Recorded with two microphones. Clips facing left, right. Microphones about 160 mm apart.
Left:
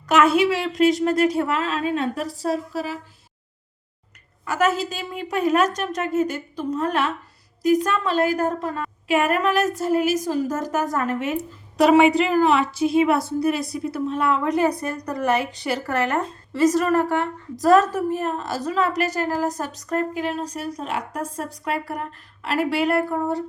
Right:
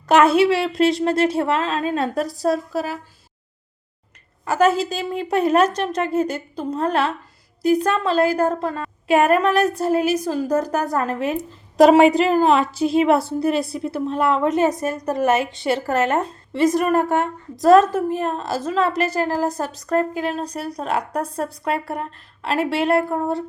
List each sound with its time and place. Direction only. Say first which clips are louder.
0.1 s a woman's voice: right 3 dB; 35° right (ahead or behind)
4.4 s a woman's voice: right 4 dB; 35° right (ahead or behind)